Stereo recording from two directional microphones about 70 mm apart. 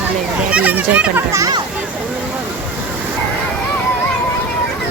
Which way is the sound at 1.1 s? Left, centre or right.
Right.